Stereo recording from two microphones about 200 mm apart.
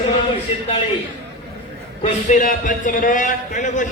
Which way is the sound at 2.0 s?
40° left (ahead or behind).